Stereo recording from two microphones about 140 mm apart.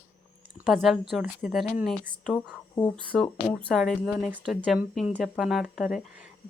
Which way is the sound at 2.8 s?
10° left (ahead or behind).